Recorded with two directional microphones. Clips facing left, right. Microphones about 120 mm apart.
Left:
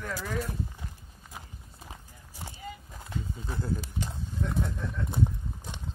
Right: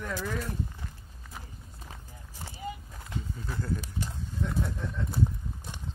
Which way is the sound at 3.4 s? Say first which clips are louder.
Left 1 dB; 20° left (ahead or behind).